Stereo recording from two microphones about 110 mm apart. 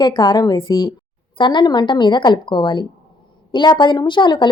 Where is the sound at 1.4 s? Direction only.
45° left (ahead or behind).